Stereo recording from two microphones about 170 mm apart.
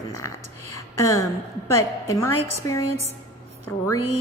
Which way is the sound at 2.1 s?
15° left (ahead or behind).